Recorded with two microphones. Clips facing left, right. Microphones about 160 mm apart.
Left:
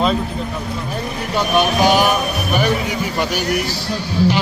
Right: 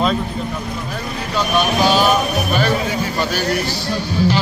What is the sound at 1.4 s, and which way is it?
Speech, 15° left (ahead or behind).